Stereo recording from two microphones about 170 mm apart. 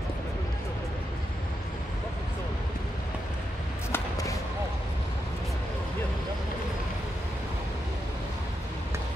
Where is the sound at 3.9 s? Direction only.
20° left (ahead or behind).